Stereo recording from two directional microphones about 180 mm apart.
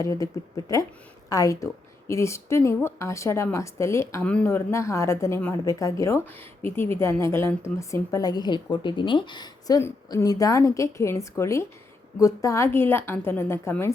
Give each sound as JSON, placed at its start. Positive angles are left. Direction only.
{"t": 0.0, "sound": "speech", "side_deg": 20}